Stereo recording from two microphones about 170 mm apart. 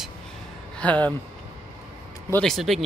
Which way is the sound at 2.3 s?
5° left (ahead or behind).